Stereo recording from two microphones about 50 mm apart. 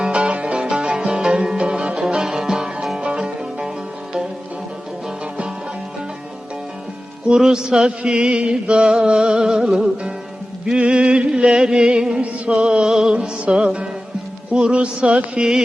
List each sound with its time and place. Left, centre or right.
0.0 s music: right
3.0 s music: centre
7.3 s a sound: centre
13.1 s music: right